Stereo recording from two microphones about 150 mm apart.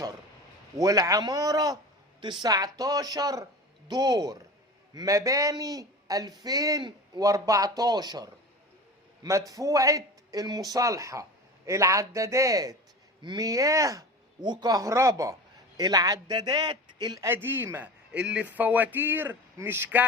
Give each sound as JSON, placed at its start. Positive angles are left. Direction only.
{"t": 0.8, "sound": "speech", "side_deg": -25}
{"t": 9.5, "sound": "speech", "side_deg": -25}
{"t": 17.2, "sound": "a man's voice", "side_deg": -15}